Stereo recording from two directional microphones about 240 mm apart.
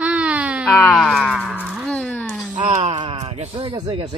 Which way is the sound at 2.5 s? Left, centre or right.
Right.